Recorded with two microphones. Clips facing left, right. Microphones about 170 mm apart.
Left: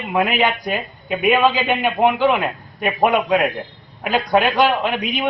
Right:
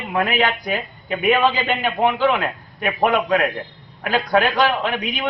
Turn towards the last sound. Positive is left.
turn(degrees=15)  # may be behind; listen again after turning